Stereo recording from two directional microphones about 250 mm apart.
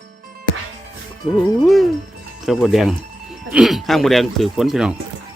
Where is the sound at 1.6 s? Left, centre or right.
Centre.